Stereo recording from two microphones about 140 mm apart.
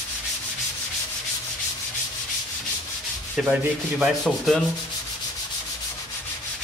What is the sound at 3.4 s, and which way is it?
Sanding, 5° right (ahead or behind).